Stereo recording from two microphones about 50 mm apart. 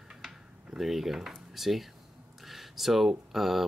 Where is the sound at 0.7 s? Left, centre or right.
Centre.